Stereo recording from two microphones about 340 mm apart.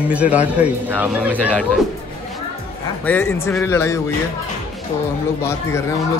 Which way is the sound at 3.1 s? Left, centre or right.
Centre.